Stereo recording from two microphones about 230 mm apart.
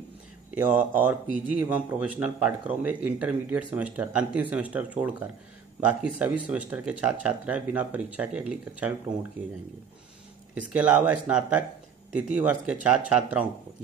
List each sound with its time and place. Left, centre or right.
0.6 s a man's voice: centre
10.7 s a man's voice: centre